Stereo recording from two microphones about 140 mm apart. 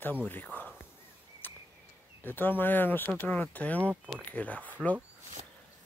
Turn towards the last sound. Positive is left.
turn(degrees=10)  # may be behind; listen again after turning